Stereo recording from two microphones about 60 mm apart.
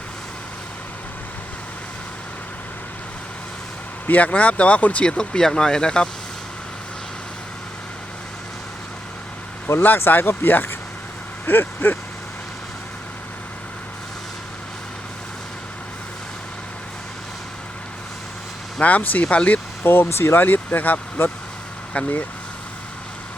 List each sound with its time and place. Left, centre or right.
4.0 s speech: left
9.8 s speech: left
18.8 s speech: left
19.8 s speech: left